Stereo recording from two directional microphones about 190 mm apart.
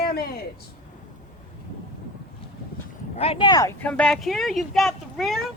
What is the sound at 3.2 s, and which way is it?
Speech, 30° left (ahead or behind).